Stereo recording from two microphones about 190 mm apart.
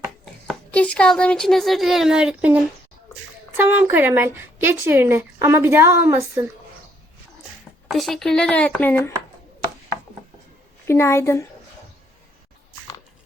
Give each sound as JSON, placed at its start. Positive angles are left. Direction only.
{"t": 0.4, "sound": "speech", "side_deg": 5}
{"t": 3.6, "sound": "a woman's voice", "side_deg": -10}
{"t": 7.9, "sound": "speech", "side_deg": 0}
{"t": 10.8, "sound": "a woman's voice", "side_deg": 15}